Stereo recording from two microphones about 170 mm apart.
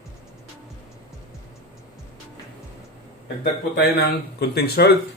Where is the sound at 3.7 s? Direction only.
75° left (ahead or behind).